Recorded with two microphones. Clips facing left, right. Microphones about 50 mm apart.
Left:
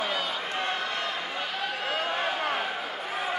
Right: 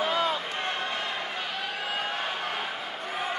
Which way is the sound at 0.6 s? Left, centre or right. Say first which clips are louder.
Left 1 dB; centre.